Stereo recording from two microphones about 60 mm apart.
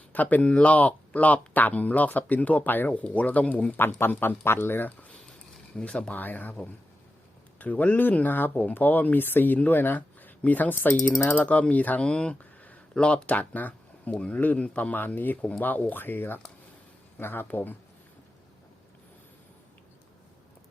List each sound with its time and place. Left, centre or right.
0.1 s speech: left
12.0 s speech: centre; by 17.7 s left